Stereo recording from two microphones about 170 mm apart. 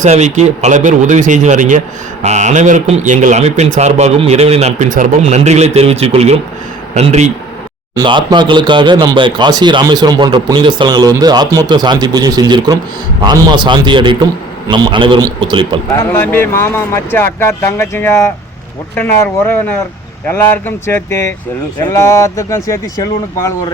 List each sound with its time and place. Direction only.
0.0 s speech: 40° right (ahead or behind)
7.9 s speech: 25° right (ahead or behind)
16.0 s speech: 15° left (ahead or behind)